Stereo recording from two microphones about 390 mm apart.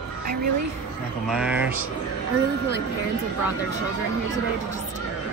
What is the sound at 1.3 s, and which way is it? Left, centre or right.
Speech, centre.